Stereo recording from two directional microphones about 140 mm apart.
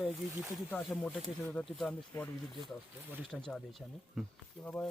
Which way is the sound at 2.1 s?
20° left (ahead or behind).